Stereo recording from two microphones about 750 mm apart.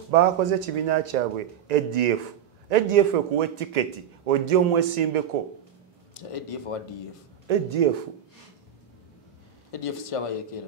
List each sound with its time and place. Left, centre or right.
0.1 s a man's voice: right
6.3 s speech: left
7.4 s a man's voice: right
9.7 s speech: left